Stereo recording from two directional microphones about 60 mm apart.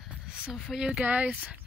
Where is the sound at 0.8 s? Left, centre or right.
Centre.